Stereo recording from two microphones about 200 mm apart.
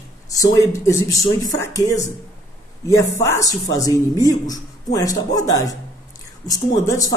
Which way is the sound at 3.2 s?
15° left (ahead or behind).